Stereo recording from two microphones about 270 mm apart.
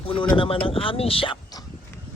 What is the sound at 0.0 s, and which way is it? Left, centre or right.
Speech, centre.